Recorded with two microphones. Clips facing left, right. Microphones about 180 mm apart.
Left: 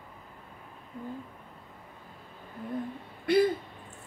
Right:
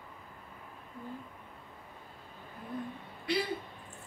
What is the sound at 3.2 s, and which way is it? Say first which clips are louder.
Speech: left 10 dB; 55° left (ahead or behind).